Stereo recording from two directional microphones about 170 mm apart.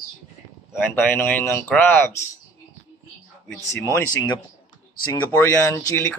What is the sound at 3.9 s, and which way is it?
Speech, 25° left (ahead or behind).